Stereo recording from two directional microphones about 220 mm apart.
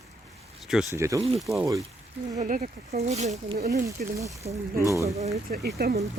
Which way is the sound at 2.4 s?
35° right (ahead or behind).